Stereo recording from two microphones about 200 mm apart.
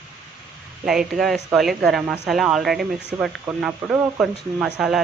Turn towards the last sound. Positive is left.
turn(degrees=-5)  # may be behind; listen again after turning